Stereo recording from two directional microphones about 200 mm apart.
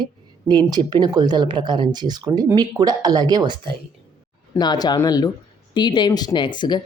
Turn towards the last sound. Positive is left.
turn(degrees=25)  # may be behind; listen again after turning